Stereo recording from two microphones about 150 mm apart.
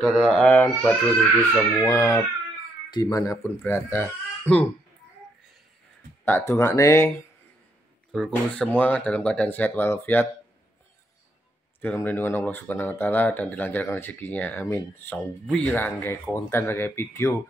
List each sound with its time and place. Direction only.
0.0 s speech: 5° right (ahead or behind)
0.4 s speech: 10° left (ahead or behind)
1.9 s speech: 20° left (ahead or behind)
6.2 s speech: 15° left (ahead or behind)
8.1 s speech: 5° left (ahead or behind)
11.8 s speech: 15° left (ahead or behind)